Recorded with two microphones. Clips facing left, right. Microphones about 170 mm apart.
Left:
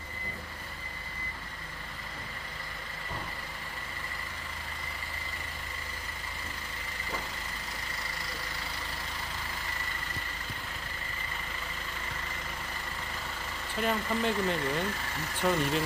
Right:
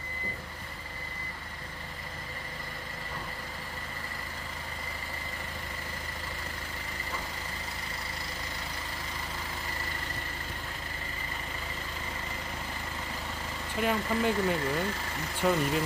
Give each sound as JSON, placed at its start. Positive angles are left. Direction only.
{"t": 13.7, "sound": "speech", "side_deg": -10}